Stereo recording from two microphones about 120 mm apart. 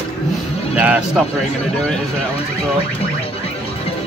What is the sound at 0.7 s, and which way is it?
Speech, 10° right (ahead or behind).